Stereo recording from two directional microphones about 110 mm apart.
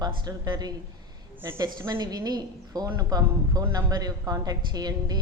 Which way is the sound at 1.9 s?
40° right (ahead or behind).